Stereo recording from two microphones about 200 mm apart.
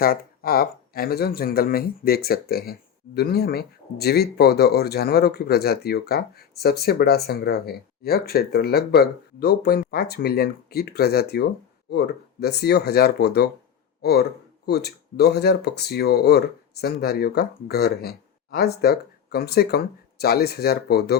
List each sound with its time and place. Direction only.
0.0 s speech: 50° left (ahead or behind)